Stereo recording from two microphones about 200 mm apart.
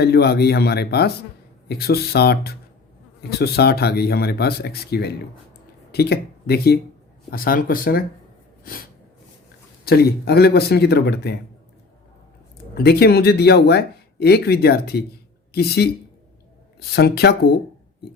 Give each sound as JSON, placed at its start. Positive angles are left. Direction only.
{"t": 0.0, "sound": "speech", "side_deg": 55}
{"t": 9.8, "sound": "speech", "side_deg": 50}
{"t": 12.7, "sound": "speech", "side_deg": 55}
{"t": 16.9, "sound": "speech", "side_deg": 55}